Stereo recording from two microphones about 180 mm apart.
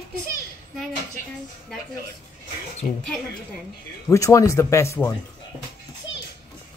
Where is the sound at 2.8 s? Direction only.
45° left (ahead or behind).